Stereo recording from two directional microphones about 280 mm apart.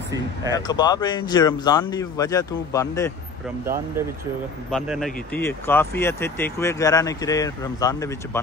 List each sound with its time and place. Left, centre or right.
0.5 s speech: centre
4.6 s speech: centre